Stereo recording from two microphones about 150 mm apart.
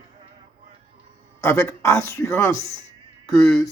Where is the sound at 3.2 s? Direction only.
Centre (ahead or behind).